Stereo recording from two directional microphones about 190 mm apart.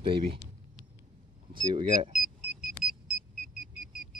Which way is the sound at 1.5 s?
25° right (ahead or behind).